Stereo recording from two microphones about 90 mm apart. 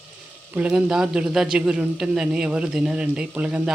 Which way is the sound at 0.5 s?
10° right (ahead or behind).